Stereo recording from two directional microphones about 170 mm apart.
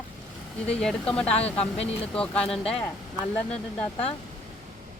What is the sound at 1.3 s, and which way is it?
Speech, 35° left (ahead or behind).